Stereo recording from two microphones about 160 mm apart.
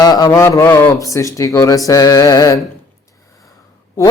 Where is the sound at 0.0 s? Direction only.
25° left (ahead or behind).